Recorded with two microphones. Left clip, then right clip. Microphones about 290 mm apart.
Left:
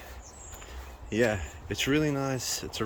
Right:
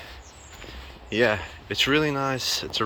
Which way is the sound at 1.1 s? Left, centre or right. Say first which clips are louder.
Right 5 dB; centre.